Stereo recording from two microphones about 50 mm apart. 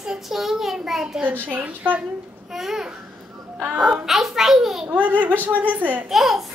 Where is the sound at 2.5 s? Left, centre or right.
Centre.